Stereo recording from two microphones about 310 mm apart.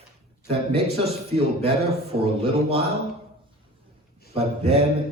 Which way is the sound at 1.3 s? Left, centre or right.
Centre.